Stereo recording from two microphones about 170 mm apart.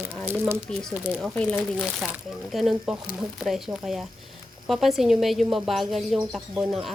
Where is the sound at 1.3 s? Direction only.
5° left (ahead or behind).